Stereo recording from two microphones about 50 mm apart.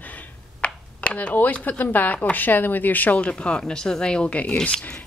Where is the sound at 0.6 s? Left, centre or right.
Left.